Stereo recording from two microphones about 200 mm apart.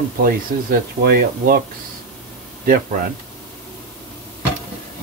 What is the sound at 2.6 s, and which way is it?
Speech, 45° right (ahead or behind).